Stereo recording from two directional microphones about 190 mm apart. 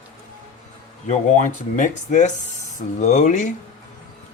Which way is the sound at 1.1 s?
40° left (ahead or behind).